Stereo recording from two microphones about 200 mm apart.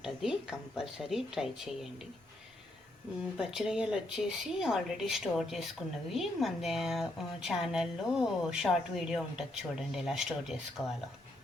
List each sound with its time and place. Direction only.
0.0 s a woman's voice: centre (ahead or behind)
3.3 s a woman's voice: 5° right (ahead or behind)